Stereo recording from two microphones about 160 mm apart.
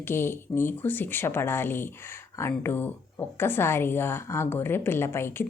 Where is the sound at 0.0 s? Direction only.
15° left (ahead or behind).